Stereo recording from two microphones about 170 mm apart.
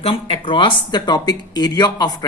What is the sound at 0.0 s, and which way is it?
Speech, 35° left (ahead or behind).